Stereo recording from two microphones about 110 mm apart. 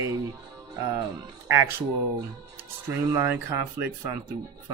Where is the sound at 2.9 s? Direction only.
20° right (ahead or behind).